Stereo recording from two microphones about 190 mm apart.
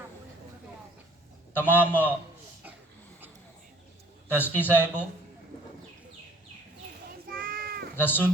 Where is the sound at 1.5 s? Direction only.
10° left (ahead or behind).